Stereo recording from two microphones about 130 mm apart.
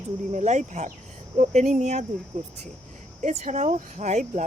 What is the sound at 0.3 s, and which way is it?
Speech, 65° right (ahead or behind).